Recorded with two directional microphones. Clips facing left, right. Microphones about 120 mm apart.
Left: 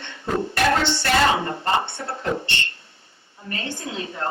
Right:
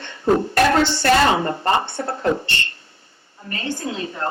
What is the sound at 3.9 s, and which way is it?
Speech, 40° right (ahead or behind).